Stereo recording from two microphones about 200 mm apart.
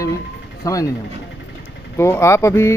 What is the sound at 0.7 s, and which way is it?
Speech, 15° left (ahead or behind).